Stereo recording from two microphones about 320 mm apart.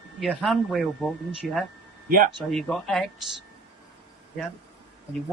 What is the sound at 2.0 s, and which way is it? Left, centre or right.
Speech, right.